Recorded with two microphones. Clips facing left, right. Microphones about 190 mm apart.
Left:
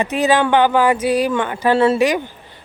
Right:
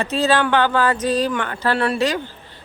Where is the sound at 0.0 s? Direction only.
15° left (ahead or behind).